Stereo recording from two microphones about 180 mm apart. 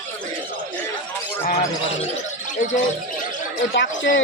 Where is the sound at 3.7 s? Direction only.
70° left (ahead or behind).